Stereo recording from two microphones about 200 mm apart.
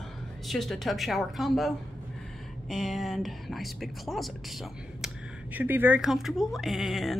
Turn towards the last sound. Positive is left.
turn(degrees=0)  # may be behind; listen again after turning